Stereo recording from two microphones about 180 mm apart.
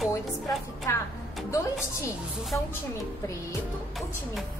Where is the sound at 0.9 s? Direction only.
15° left (ahead or behind).